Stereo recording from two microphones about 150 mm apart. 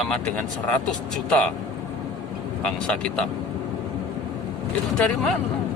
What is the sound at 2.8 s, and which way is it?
Speech, 5° left (ahead or behind).